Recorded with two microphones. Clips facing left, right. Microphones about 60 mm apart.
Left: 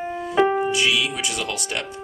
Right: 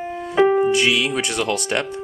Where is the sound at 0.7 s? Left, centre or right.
Right.